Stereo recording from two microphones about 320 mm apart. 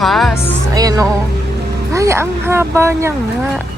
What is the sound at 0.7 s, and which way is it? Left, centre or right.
Speech, centre.